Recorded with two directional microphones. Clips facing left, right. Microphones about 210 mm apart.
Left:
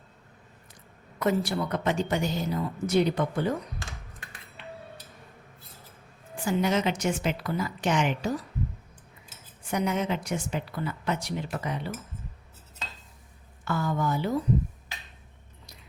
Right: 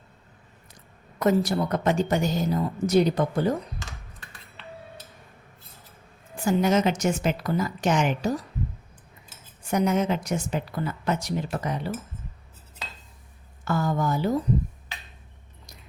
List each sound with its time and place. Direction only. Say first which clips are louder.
1.2 s a woman's voice: right 4 dB; 40° right (ahead or behind)
6.4 s a woman's voice: right 4 dB; 45° right (ahead or behind)
9.6 s a woman's voice: right 4 dB; 45° right (ahead or behind)
13.7 s a woman's voice: right 3 dB; 40° right (ahead or behind)